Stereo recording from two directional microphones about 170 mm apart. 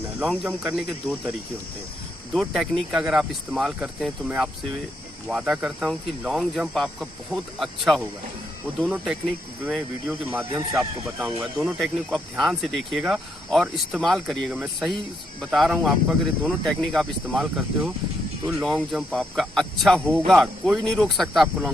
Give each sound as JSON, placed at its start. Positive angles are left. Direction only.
{"t": 0.0, "sound": "speech", "side_deg": -10}
{"t": 2.3, "sound": "speech", "side_deg": 0}
{"t": 10.6, "sound": "speech", "side_deg": -20}
{"t": 11.6, "sound": "speech", "side_deg": 0}